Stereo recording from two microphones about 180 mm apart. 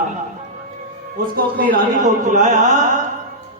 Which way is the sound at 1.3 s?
50° right (ahead or behind).